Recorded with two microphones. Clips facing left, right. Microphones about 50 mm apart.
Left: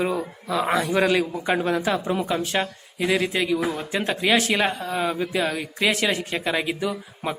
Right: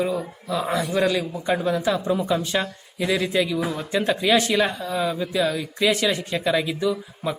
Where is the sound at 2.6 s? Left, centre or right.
Centre; by 5.6 s left.